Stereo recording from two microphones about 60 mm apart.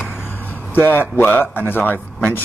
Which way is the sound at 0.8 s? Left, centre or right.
Left.